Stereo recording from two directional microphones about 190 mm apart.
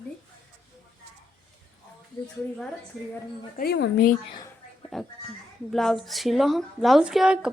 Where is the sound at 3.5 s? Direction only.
55° left (ahead or behind).